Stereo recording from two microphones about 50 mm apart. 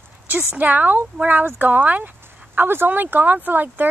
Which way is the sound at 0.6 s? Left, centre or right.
Right.